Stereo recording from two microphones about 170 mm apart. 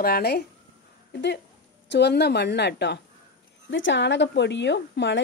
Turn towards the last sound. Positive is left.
turn(degrees=90)